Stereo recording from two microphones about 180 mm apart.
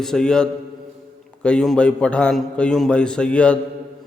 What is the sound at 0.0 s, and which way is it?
A man's voice, 5° left (ahead or behind).